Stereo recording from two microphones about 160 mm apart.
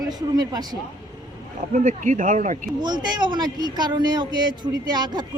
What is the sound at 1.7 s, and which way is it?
Speech, 50° right (ahead or behind).